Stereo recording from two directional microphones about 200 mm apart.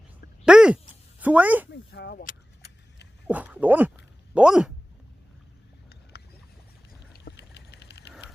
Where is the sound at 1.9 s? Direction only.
55° left (ahead or behind).